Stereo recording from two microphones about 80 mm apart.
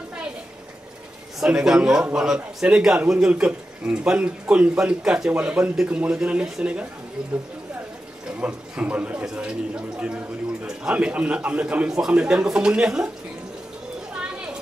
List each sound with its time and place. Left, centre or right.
1.4 s a man's voice: centre
8.3 s a man's voice: centre
14.1 s children playing: centre